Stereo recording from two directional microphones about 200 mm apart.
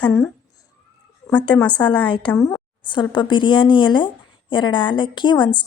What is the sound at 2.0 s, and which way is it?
Speech, 25° left (ahead or behind).